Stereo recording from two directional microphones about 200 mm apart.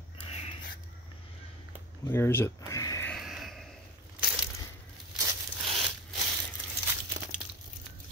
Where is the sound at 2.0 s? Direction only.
10° left (ahead or behind).